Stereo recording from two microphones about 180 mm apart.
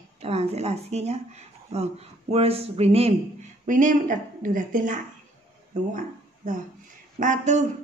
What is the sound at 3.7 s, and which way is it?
A woman's voice, 45° right (ahead or behind).